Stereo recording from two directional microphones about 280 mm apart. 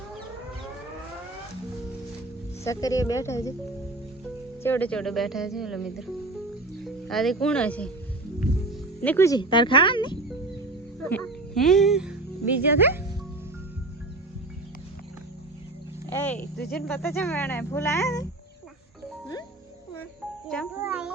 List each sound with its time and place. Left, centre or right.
2.6 s speech: centre
4.6 s speech: centre
9.0 s speech: centre
11.0 s speech: centre
16.0 s a sound: centre
16.7 s speech: centre
20.7 s a sound: centre